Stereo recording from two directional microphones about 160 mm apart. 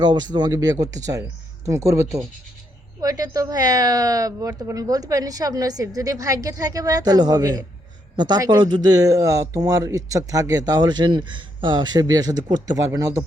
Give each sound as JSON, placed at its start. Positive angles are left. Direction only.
{"t": 0.0, "sound": "speech", "side_deg": -25}